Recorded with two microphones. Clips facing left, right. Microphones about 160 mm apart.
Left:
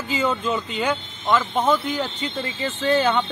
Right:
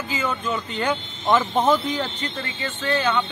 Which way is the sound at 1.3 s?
15° right (ahead or behind).